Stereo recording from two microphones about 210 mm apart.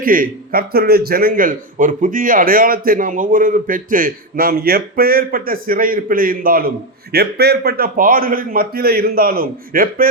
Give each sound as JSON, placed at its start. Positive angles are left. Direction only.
{"t": 0.0, "sound": "a man's voice", "side_deg": -40}